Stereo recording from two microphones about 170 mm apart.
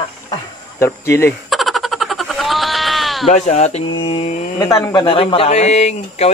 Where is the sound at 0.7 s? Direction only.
15° left (ahead or behind).